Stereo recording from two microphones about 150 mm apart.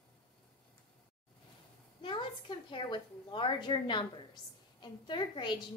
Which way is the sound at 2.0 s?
30° left (ahead or behind).